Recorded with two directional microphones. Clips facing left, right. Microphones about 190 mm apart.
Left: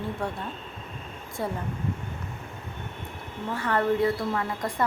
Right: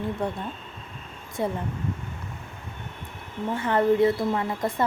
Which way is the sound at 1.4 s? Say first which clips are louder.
Right 3 dB; 20° right (ahead or behind).